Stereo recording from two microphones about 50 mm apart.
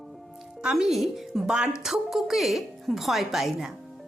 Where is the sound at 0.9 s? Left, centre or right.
Centre.